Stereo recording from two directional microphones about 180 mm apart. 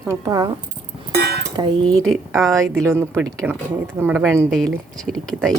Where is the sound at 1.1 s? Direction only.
60° right (ahead or behind).